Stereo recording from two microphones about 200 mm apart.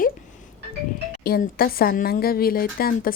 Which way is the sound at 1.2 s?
50° left (ahead or behind).